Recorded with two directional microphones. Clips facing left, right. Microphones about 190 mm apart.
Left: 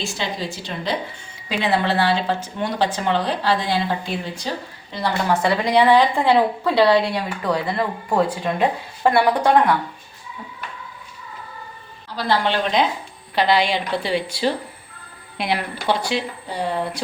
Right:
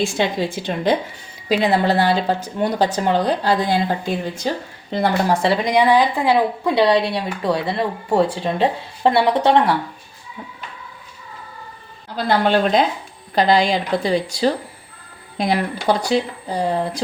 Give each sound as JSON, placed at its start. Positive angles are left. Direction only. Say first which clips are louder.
{"t": 0.0, "sound": "a woman's voice", "louder": "right 7 dB", "side_deg": -55}
{"t": 1.5, "sound": "a woman's voice", "louder": "right 4 dB", "side_deg": -40}
{"t": 5.3, "sound": "a woman's voice", "louder": "right 1 dB", "side_deg": -30}
{"t": 12.1, "sound": "a woman's voice", "louder": "right 4 dB", "side_deg": -45}